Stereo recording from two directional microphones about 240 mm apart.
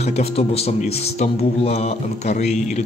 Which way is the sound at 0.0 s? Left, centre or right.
Left.